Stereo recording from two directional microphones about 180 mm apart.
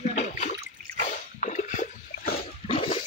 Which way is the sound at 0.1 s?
40° left (ahead or behind).